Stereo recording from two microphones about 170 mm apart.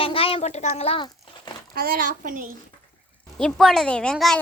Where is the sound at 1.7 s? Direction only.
60° right (ahead or behind).